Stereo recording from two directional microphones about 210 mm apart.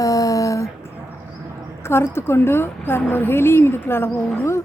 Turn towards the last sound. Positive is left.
turn(degrees=10)  # may be behind; listen again after turning